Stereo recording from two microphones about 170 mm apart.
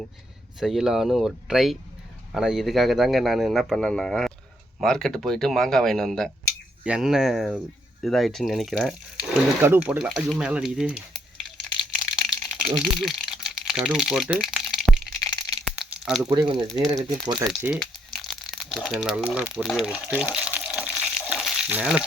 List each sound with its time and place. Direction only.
0.6 s a man's voice: 5° right (ahead or behind)
9.6 s a man's voice: 15° right (ahead or behind)
11.9 s crumpling: centre (ahead or behind)
15.6 s a sound: centre (ahead or behind)
16.3 s speech: 30° right (ahead or behind)
17.7 s crumpling: centre (ahead or behind)
19.6 s a man's voice: 5° right (ahead or behind)
20.1 s frying: 5° right (ahead or behind)